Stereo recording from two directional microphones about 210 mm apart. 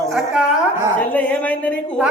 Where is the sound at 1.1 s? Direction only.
10° left (ahead or behind).